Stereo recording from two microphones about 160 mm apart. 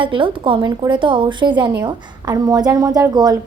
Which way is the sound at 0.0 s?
30° right (ahead or behind).